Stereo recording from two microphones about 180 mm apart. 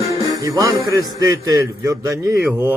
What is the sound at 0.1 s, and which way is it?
Music, 20° right (ahead or behind).